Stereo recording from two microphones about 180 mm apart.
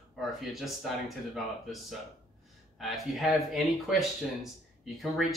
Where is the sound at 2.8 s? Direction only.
Centre (ahead or behind).